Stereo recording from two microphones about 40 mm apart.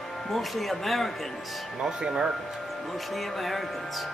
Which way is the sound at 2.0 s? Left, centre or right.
Centre.